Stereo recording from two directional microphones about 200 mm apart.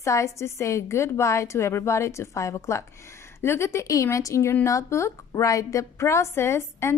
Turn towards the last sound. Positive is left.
turn(degrees=10)  # may be behind; listen again after turning